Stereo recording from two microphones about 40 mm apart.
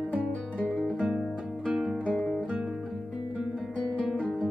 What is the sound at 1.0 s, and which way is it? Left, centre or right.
Music, centre.